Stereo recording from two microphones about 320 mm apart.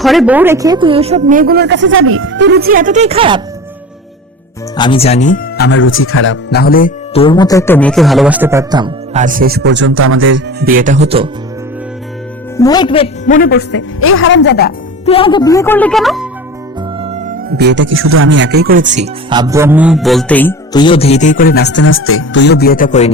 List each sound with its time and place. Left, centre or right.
0.0 s a woman's voice: centre
4.8 s speech: centre
12.5 s a man's voice: centre; by 14.7 s left
15.0 s speech: centre
17.0 s music: centre
17.5 s speech: right; by 23.1 s left